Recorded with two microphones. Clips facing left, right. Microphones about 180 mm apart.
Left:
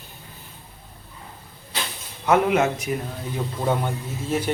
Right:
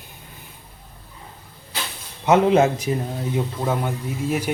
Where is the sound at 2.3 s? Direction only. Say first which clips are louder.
Right 3 dB; 25° right (ahead or behind).